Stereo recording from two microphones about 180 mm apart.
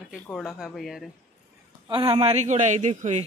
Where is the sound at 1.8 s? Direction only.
25° right (ahead or behind).